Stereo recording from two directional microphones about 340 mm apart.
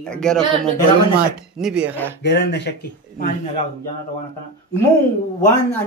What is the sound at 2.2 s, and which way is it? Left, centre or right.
Speech, left.